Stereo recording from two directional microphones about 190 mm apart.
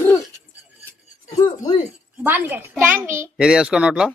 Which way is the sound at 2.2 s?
10° right (ahead or behind).